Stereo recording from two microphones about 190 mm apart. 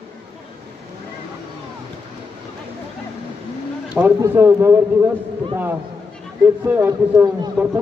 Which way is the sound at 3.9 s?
10° right (ahead or behind).